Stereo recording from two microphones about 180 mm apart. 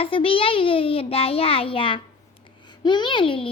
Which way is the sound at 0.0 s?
30° left (ahead or behind).